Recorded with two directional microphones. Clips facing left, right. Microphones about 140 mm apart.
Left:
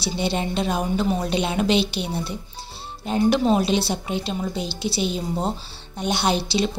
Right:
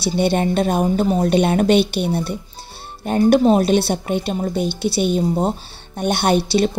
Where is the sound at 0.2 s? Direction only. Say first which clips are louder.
Right 7 dB; 55° right (ahead or behind).